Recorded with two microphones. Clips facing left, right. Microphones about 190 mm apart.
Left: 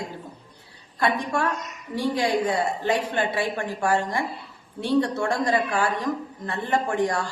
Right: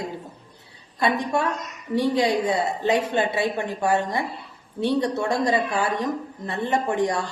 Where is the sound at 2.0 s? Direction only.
20° right (ahead or behind).